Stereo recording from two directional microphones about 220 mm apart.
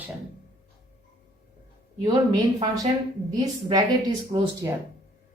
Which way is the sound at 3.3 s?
15° right (ahead or behind).